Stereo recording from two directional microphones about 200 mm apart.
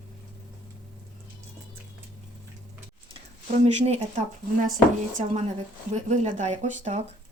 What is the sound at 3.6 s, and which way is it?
A woman's voice, 30° right (ahead or behind).